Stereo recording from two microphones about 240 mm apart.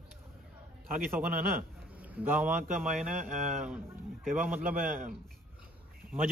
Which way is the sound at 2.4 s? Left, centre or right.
Right.